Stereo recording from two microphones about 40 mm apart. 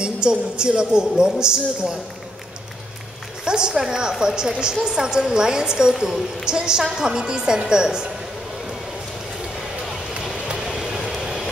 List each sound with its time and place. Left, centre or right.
0.0 s a woman's voice: right
3.4 s a woman's voice: centre
10.5 s vehicle: centre